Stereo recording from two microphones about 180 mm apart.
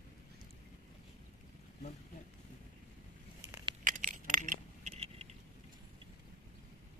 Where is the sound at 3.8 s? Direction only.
45° right (ahead or behind).